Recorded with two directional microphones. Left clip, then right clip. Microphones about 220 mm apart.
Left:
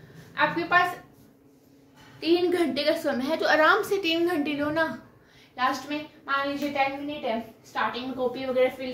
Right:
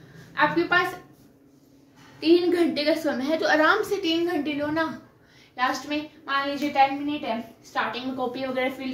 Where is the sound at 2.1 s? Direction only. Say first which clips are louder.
Right 3 dB; centre (ahead or behind); by 4.8 s 20° left (ahead or behind).